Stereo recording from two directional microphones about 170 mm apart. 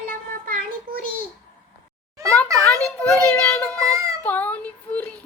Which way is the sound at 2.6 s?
5° left (ahead or behind).